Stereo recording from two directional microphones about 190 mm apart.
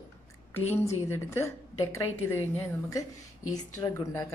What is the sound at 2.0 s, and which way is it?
Speech, 90° left.